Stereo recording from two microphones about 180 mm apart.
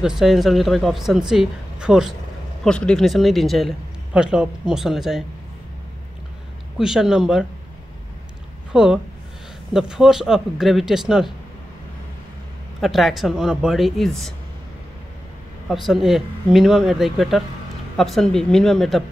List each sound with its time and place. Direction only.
0.0 s speech: centre (ahead or behind)
6.8 s speech: 5° right (ahead or behind)
8.7 s speech: 5° right (ahead or behind)
12.8 s speech: centre (ahead or behind)
15.7 s speech: centre (ahead or behind)